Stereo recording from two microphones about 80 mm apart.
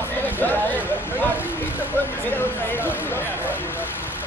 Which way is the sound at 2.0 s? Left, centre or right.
Left.